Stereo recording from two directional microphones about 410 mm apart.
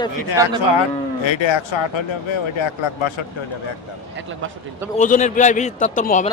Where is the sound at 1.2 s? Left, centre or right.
Left.